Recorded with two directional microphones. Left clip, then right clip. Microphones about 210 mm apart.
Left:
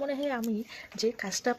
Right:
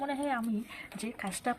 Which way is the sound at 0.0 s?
45° left (ahead or behind).